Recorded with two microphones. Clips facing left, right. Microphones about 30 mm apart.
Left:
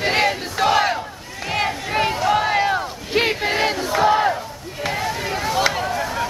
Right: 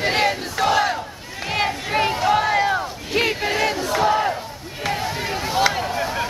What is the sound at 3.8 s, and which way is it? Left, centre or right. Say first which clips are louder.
Battle cry: left 3 dB; centre.